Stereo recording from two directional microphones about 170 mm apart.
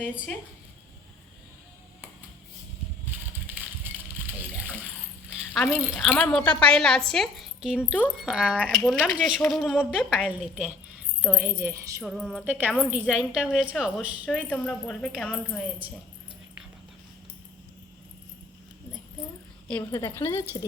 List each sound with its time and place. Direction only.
5.5 s a woman's voice: 5° left (ahead or behind); by 12.0 s 15° right (ahead or behind)
12.0 s a woman's voice: centre (ahead or behind)
12.5 s a woman's voice: 10° right (ahead or behind)
14.5 s a woman's voice: 5° left (ahead or behind)
19.6 s speech: 10° left (ahead or behind)